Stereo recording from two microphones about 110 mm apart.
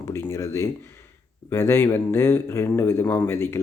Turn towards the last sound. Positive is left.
turn(degrees=25)  # may be behind; listen again after turning